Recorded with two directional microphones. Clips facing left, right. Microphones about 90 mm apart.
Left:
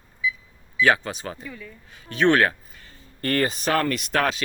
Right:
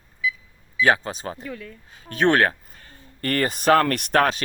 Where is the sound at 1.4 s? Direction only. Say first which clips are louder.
Right 4 dB; 60° right (ahead or behind).